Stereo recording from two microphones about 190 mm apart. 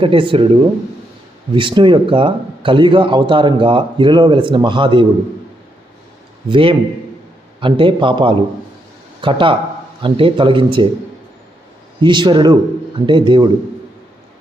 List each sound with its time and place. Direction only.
0.0 s speech: 25° right (ahead or behind)
6.5 s speech: 30° right (ahead or behind)
11.9 s speech: 25° right (ahead or behind)